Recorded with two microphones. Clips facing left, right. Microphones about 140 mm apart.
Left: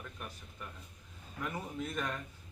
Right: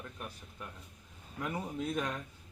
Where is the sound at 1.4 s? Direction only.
15° right (ahead or behind).